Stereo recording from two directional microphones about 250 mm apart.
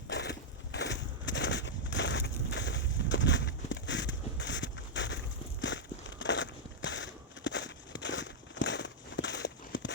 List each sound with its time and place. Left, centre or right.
0.1 s crushing: left